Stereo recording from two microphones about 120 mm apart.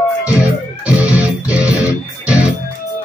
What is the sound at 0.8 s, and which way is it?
Music, 10° right (ahead or behind).